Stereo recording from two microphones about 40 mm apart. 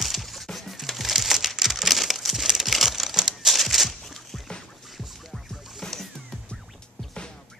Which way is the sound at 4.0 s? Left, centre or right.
Centre.